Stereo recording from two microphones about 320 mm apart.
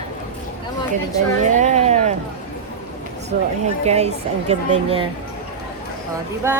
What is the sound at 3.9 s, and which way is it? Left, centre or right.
A woman's voice, centre.